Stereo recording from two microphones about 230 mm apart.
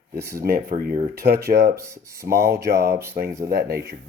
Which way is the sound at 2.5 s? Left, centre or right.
Right.